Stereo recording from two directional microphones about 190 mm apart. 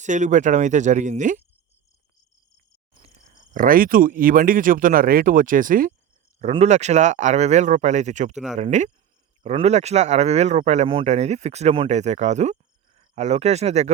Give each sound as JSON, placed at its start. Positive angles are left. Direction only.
{"t": 0.0, "sound": "speech", "side_deg": -40}
{"t": 3.5, "sound": "speech", "side_deg": -50}
{"t": 6.4, "sound": "speech", "side_deg": -35}